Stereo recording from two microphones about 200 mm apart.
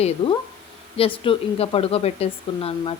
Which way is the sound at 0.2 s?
25° left (ahead or behind).